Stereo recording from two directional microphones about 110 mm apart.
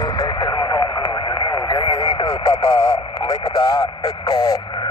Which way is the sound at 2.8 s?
40° left (ahead or behind).